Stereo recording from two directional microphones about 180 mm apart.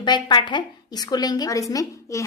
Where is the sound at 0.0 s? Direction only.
25° left (ahead or behind).